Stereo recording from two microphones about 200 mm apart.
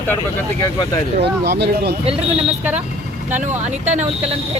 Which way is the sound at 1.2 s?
55° right (ahead or behind).